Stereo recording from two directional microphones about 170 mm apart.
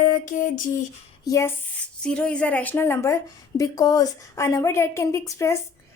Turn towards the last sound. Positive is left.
turn(degrees=20)  # may be behind; listen again after turning